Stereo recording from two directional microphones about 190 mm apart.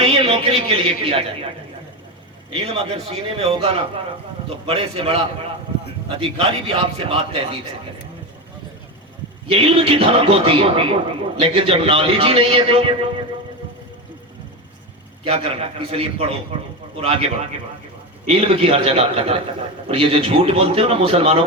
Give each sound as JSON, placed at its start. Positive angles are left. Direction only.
{"t": 0.0, "sound": "a man's voice", "side_deg": -30}
{"t": 2.5, "sound": "a man's voice", "side_deg": -30}
{"t": 9.5, "sound": "a man's voice", "side_deg": -30}
{"t": 15.2, "sound": "a man's voice", "side_deg": -30}